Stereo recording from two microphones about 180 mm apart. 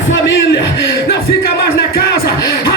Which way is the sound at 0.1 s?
90° left.